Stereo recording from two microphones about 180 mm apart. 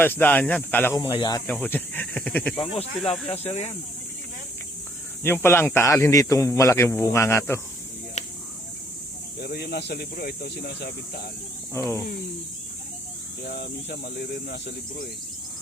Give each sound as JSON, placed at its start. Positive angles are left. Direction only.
{"t": 0.0, "sound": "speech", "side_deg": 10}
{"t": 1.5, "sound": "speech", "side_deg": 10}
{"t": 3.3, "sound": "speech", "side_deg": 35}
{"t": 5.2, "sound": "speech", "side_deg": 10}
{"t": 8.2, "sound": "a sound", "side_deg": 40}
{"t": 9.4, "sound": "speech", "side_deg": 60}
{"t": 11.7, "sound": "speech", "side_deg": 15}
{"t": 13.4, "sound": "speech", "side_deg": 60}